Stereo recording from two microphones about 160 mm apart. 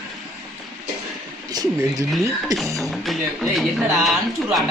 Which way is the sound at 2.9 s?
Centre (ahead or behind).